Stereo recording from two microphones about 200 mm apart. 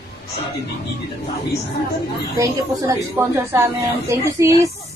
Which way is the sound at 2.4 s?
15° right (ahead or behind).